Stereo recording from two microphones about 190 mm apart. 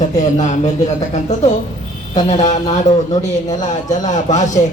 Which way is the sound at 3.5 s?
40° left (ahead or behind).